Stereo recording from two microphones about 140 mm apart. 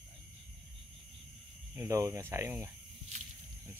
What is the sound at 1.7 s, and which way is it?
Speech, 20° right (ahead or behind).